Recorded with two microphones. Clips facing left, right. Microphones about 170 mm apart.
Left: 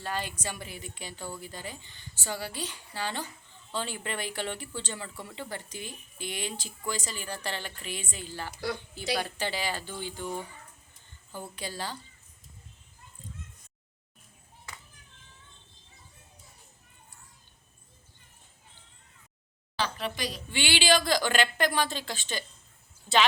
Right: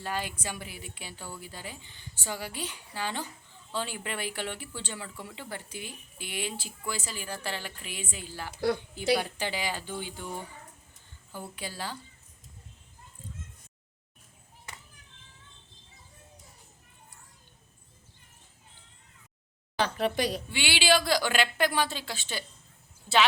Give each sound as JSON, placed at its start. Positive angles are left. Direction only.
{"t": 0.0, "sound": "speech", "side_deg": -10}
{"t": 11.3, "sound": "speech", "side_deg": -10}
{"t": 19.8, "sound": "a woman's voice", "side_deg": -55}
{"t": 20.5, "sound": "speech", "side_deg": -5}